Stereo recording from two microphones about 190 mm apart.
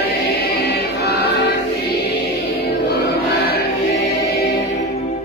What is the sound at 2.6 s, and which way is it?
Music, 60° left (ahead or behind).